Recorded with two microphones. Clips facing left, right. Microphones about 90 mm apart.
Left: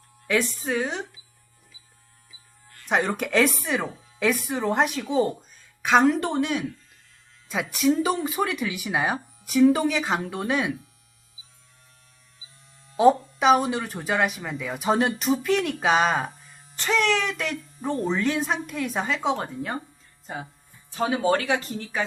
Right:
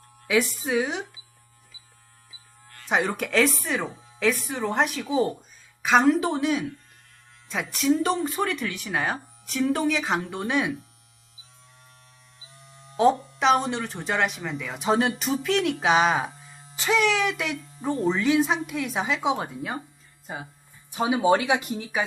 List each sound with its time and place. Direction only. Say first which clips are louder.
0.3 s speech: right 1 dB; 5° right (ahead or behind)
2.8 s speech: left 1 dB; centre (ahead or behind)
12.4 s music: right 6 dB; 75° right (ahead or behind)
13.0 s speech: left 2 dB; 5° left (ahead or behind)
20.9 s speech: right 2 dB; 15° right (ahead or behind)